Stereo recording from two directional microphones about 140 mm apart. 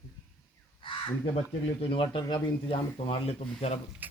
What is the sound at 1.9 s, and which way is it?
Speech, 40° left (ahead or behind).